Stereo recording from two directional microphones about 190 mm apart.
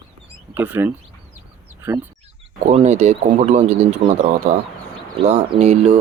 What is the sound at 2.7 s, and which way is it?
Speech, 35° right (ahead or behind).